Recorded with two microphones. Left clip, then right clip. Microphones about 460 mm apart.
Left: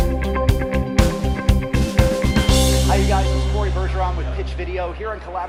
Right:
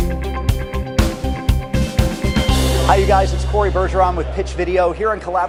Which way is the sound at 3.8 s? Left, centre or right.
Right.